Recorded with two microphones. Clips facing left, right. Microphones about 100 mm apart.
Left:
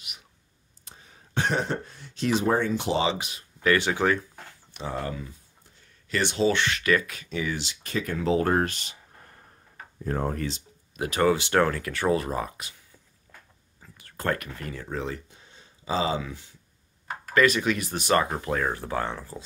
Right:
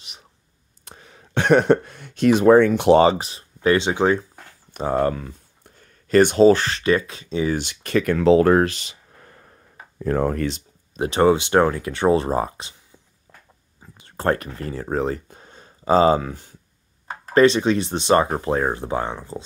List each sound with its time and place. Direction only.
0.8 s speech: 70° right (ahead or behind)
3.1 s speech: 35° right (ahead or behind)
4.7 s speech: 50° right (ahead or behind); by 7.5 s 25° right (ahead or behind)
7.5 s speech: 60° right (ahead or behind); by 8.9 s 90° right
9.9 s speech: 90° right; by 10.6 s 70° right (ahead or behind)
11.0 s speech: 25° right (ahead or behind)
13.7 s speech: 20° right (ahead or behind); by 16.5 s 45° right (ahead or behind)
17.3 s speech: 30° right (ahead or behind)